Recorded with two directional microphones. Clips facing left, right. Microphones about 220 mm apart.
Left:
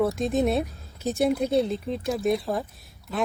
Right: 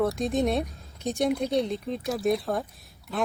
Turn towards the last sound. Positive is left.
turn(degrees=0)  # may be behind; listen again after turning